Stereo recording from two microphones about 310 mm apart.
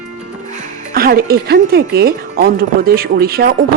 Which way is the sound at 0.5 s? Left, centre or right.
Right.